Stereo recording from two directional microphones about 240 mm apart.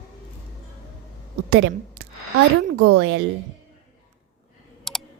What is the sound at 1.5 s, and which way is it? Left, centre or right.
Speech, right.